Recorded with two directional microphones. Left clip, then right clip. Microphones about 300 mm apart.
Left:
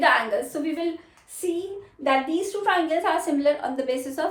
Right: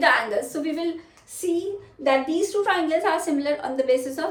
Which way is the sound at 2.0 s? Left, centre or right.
Centre.